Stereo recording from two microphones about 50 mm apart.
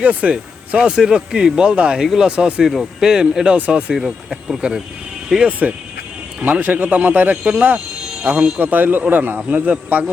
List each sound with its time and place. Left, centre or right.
0.0 s speech: right
0.8 s speech: centre
2.0 s speech: centre
2.3 s speech: right
2.6 s speech: centre
3.1 s speech: centre
3.9 s speech: centre
5.5 s a man's voice: right
9.5 s a man's voice: right